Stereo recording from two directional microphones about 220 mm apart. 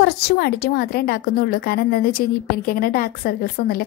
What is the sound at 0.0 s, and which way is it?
A woman's voice, 45° left (ahead or behind).